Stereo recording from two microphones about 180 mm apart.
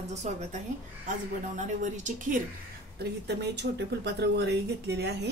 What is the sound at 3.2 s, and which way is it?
Speech, 70° right (ahead or behind).